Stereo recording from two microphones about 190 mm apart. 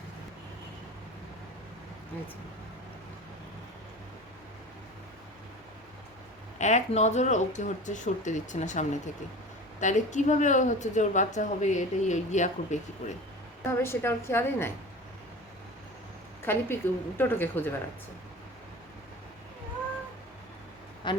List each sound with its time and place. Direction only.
6.6 s speech: 40° left (ahead or behind)
13.7 s a woman's voice: 15° left (ahead or behind)
16.4 s a woman's voice: 10° left (ahead or behind)
21.0 s quack: 25° left (ahead or behind)